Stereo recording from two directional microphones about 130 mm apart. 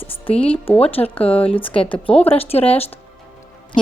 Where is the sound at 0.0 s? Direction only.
45° left (ahead or behind).